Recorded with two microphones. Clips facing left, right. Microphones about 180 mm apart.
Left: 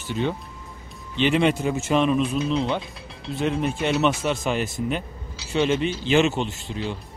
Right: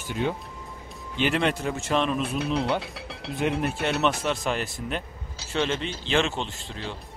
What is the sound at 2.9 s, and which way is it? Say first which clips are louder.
Music: right 1 dB; 75° right (ahead or behind).